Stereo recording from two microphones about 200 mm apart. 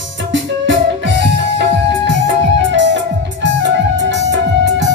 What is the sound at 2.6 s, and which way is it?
Music, 65° right (ahead or behind).